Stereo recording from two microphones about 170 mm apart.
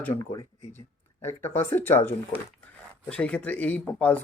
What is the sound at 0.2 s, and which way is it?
Speech, 20° left (ahead or behind).